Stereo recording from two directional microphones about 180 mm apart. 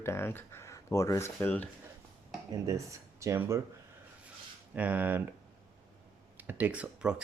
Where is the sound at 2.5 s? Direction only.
15° right (ahead or behind).